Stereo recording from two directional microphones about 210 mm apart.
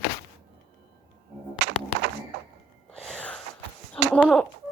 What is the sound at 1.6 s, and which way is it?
Music, 60° right (ahead or behind).